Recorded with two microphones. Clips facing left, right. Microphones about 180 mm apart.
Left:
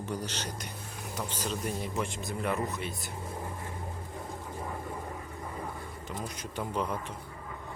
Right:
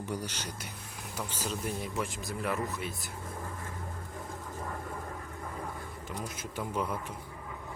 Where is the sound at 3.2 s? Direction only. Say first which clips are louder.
Left 1 dB; 20° left (ahead or behind).